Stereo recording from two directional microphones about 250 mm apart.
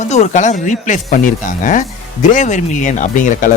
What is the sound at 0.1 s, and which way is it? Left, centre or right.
Speech, left.